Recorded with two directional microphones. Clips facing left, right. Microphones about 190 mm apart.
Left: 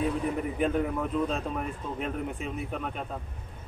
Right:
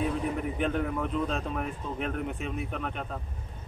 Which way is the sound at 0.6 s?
5° left (ahead or behind).